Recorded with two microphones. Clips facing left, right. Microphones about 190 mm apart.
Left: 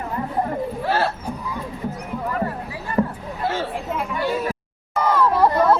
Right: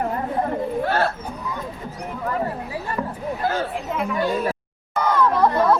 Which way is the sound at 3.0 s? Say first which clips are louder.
Left 9 dB; 40° left (ahead or behind).